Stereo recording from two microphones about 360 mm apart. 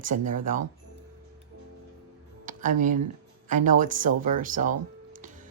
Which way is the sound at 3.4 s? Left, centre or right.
Right.